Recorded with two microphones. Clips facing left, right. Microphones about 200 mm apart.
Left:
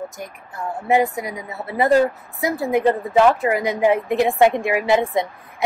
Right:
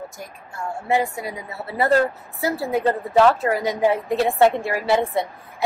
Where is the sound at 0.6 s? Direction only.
20° left (ahead or behind).